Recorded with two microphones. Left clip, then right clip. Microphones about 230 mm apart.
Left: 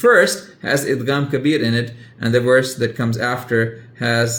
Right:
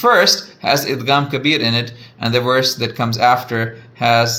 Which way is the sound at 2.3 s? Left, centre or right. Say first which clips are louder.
Left 1 dB; right.